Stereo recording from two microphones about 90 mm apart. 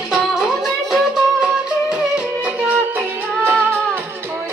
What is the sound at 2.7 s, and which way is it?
Music, 20° right (ahead or behind).